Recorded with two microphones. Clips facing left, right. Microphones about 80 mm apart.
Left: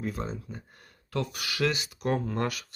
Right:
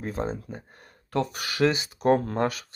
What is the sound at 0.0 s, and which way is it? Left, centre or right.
Speech, right.